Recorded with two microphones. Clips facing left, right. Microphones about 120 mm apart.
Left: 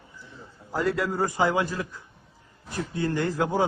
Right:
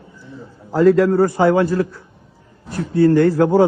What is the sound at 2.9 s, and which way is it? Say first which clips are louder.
Speech: right 14 dB; 15° left (ahead or behind).